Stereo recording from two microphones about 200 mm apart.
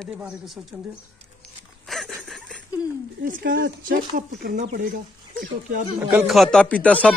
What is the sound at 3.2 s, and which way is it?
Speech, 50° right (ahead or behind).